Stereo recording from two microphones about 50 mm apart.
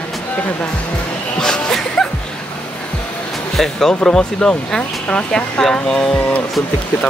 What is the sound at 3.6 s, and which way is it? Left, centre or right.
Speech, centre.